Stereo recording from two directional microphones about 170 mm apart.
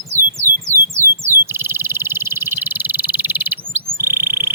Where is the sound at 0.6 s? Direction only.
15° right (ahead or behind).